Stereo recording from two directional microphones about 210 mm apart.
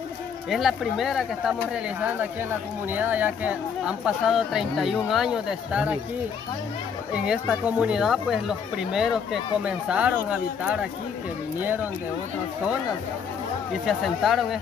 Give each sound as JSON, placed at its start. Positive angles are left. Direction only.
{"t": 0.5, "sound": "speech", "side_deg": 0}
{"t": 7.2, "sound": "speech", "side_deg": -5}
{"t": 13.8, "sound": "speech", "side_deg": 0}